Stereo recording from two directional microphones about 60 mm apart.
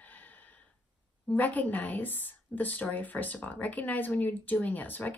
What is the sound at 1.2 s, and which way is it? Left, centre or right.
Speech, left.